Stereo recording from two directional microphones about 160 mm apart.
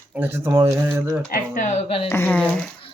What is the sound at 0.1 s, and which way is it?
Speech, 10° right (ahead or behind).